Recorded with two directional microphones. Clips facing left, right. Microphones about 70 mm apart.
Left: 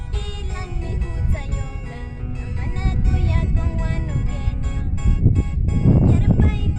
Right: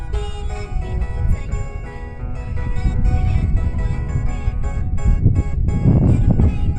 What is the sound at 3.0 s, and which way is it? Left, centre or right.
Music, right.